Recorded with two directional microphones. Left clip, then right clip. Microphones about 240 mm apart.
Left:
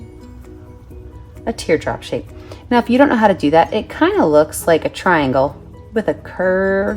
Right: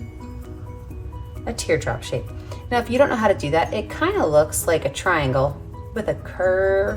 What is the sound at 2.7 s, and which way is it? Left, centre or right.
Speech, left.